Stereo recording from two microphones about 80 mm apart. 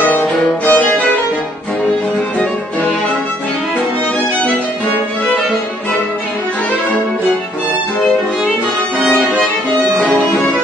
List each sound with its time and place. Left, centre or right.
0.0 s music: left